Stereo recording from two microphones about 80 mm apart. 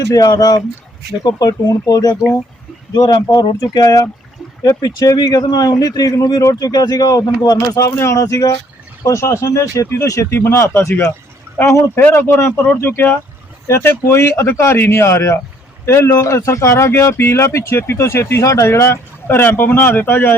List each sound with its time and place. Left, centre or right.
0.0 s speech: left
3.6 s speech: left
7.8 s a man's voice: left